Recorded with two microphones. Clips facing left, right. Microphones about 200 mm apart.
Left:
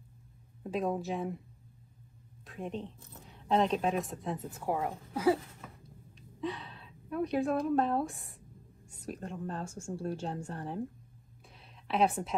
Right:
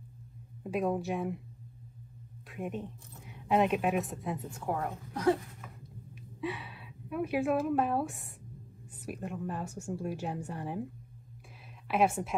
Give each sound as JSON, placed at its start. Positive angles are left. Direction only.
{"t": 0.7, "sound": "a woman's voice", "side_deg": 0}
{"t": 2.4, "sound": "a woman's voice", "side_deg": -5}
{"t": 6.4, "sound": "a woman's voice", "side_deg": -10}
{"t": 9.8, "sound": "speech", "side_deg": 10}
{"t": 10.0, "sound": "speech", "side_deg": -10}
{"t": 11.9, "sound": "a woman's voice", "side_deg": 0}